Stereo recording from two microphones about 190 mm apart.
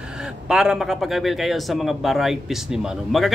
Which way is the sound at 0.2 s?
5° right (ahead or behind).